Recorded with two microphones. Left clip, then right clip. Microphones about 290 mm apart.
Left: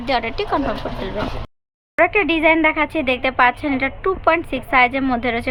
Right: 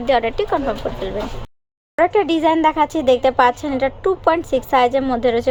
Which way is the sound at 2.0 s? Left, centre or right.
Centre.